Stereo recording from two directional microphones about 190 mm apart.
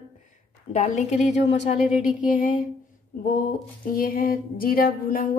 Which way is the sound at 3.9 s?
50° left (ahead or behind).